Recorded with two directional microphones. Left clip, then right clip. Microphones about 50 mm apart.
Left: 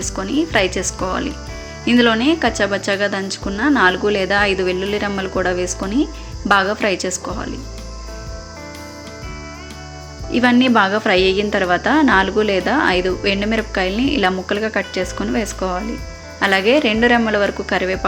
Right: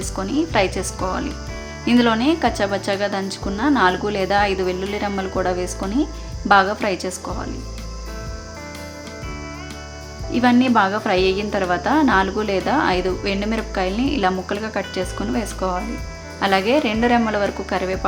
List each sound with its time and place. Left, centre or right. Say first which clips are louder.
0.0 s a woman's voice: left 2 dB; centre
1.8 s speech: left 3 dB; centre; by 7.3 s left
10.2 s speech: left 2 dB; left
10.8 s a woman's voice: left 3 dB; left; by 17.5 s centre
17.7 s a woman's voice: left 4 dB; left